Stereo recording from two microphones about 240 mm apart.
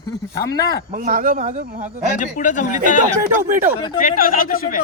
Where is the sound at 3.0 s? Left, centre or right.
Right.